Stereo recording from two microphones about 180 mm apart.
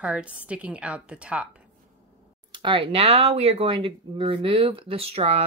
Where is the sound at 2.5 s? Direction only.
25° right (ahead or behind).